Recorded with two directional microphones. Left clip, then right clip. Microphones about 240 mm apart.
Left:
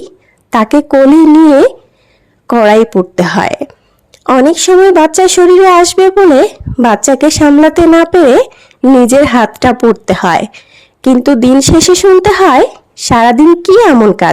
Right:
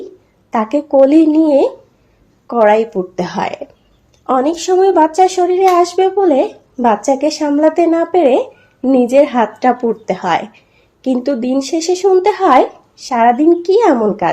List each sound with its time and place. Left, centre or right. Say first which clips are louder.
0.5 s a woman's voice: left 7 dB; left
1.5 s a sound: left 6 dB; left
2.5 s a woman's voice: left 5 dB; left